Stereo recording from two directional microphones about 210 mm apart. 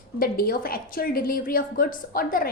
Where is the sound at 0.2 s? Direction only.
45° left (ahead or behind).